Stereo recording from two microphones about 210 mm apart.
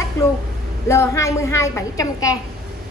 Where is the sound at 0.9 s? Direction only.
15° left (ahead or behind).